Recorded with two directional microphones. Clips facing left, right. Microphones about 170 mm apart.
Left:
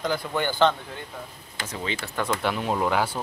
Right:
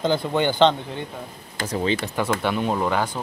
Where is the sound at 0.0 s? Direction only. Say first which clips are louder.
Right 5 dB; 25° right (ahead or behind).